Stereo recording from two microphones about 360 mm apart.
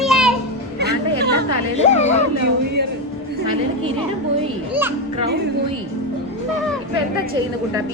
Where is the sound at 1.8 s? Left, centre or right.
Centre.